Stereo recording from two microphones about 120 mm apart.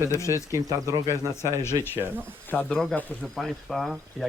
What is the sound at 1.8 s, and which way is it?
Speech, 20° right (ahead or behind).